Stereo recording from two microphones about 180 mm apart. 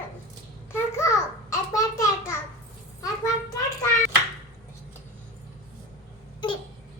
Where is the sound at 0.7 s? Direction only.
15° left (ahead or behind).